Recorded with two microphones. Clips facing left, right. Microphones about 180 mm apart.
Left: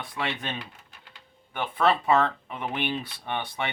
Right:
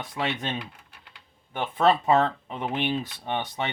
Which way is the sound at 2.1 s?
30° right (ahead or behind).